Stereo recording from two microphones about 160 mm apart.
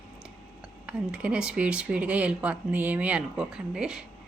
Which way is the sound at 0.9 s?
10° right (ahead or behind).